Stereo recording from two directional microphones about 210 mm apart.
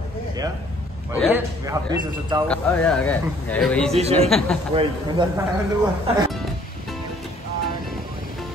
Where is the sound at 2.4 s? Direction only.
5° left (ahead or behind).